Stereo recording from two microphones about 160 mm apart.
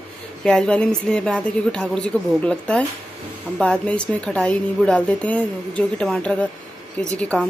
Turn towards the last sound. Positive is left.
turn(degrees=5)  # may be behind; listen again after turning